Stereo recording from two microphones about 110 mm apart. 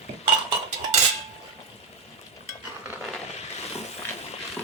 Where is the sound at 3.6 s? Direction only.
75° left (ahead or behind).